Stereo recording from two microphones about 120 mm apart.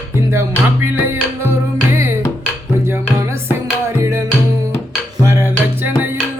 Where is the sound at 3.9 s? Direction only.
20° right (ahead or behind).